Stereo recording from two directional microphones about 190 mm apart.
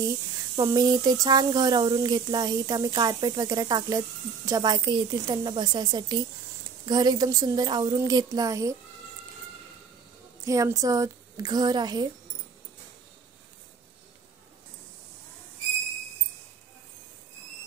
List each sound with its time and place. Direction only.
0.6 s speech: 20° right (ahead or behind)
10.4 s speech: 15° right (ahead or behind)